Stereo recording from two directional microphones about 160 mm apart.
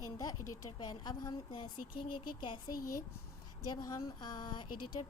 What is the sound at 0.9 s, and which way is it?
Speech, 25° left (ahead or behind).